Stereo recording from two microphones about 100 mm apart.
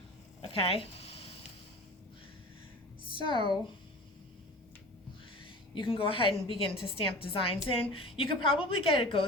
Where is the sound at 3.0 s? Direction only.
50° left (ahead or behind).